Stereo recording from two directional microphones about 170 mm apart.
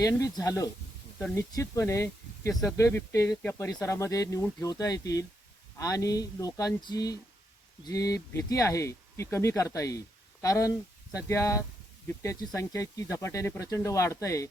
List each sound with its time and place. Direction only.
0.0 s speech: 20° left (ahead or behind)